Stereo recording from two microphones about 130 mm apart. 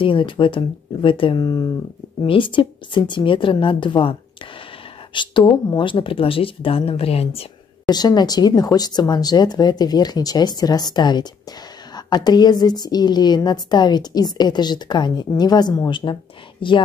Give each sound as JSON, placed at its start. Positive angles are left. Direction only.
{"t": 0.0, "sound": "a woman's voice", "side_deg": 40}
{"t": 7.9, "sound": "a woman's voice", "side_deg": 30}